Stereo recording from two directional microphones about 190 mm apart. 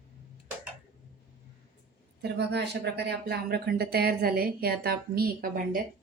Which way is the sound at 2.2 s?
60° right (ahead or behind).